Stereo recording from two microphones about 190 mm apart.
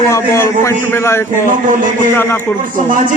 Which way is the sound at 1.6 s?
45° right (ahead or behind).